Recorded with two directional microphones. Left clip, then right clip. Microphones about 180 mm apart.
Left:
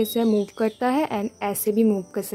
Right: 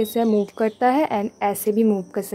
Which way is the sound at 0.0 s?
25° left (ahead or behind).